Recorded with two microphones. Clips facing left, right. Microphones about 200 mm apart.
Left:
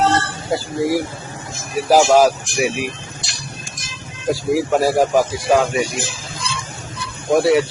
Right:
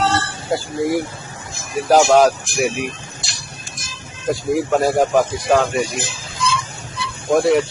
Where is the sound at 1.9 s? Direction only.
5° left (ahead or behind).